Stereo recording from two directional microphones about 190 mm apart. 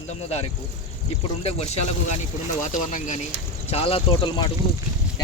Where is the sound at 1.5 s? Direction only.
35° left (ahead or behind).